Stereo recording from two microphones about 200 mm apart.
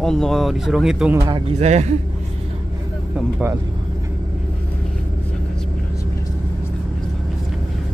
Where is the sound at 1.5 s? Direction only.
35° right (ahead or behind).